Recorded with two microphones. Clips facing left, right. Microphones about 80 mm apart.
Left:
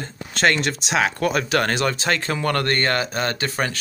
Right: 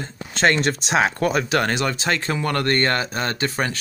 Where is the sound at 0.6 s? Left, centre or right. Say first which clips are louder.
Right 2 dB; right.